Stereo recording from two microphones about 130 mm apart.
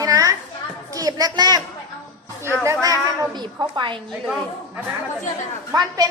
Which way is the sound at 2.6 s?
25° right (ahead or behind).